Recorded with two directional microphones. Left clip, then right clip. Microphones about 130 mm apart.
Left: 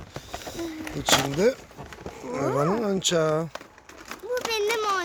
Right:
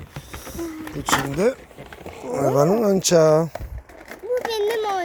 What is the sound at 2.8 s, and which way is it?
Speech, 40° right (ahead or behind).